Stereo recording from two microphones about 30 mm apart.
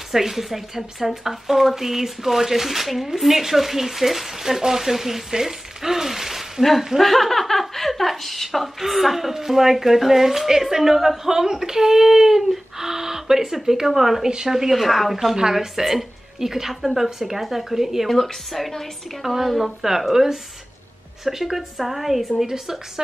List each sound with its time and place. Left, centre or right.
0.1 s speech: centre
7.0 s speech: centre
14.2 s a woman's voice: right
14.7 s speech: centre
18.0 s speech: centre